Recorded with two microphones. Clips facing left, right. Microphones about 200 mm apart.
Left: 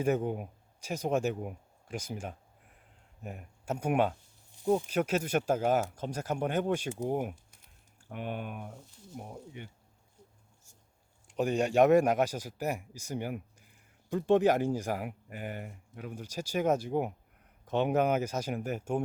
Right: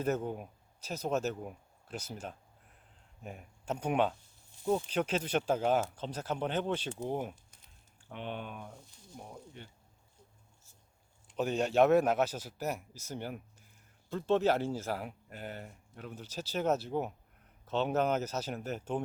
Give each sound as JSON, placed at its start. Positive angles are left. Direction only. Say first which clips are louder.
{"t": 0.0, "sound": "speech", "louder": "left 4 dB", "side_deg": 10}
{"t": 9.1, "sound": "speech", "louder": "left 4 dB", "side_deg": 20}
{"t": 11.3, "sound": "speech", "louder": "left 3 dB", "side_deg": 10}